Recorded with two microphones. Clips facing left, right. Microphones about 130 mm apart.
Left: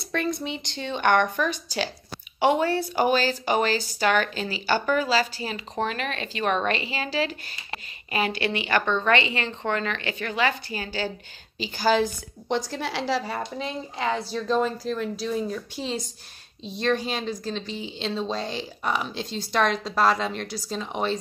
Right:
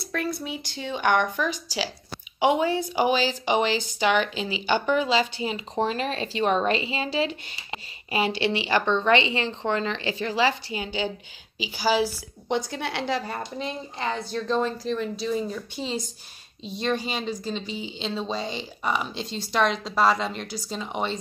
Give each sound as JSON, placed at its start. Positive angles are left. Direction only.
{"t": 0.1, "sound": "a woman's voice", "side_deg": -5}
{"t": 11.5, "sound": "speech", "side_deg": -10}